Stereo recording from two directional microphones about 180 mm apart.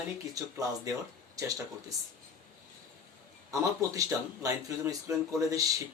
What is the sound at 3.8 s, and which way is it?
Speech, 20° right (ahead or behind).